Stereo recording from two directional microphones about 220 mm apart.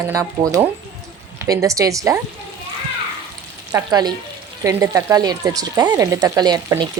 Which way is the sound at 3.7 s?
20° right (ahead or behind).